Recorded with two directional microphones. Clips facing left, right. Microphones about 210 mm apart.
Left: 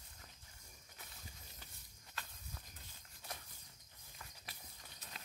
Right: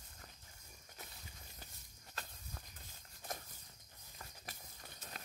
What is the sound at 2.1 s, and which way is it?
Walk, 45° right (ahead or behind).